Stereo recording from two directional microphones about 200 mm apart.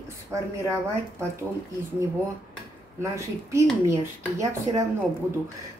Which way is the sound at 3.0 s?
15° right (ahead or behind).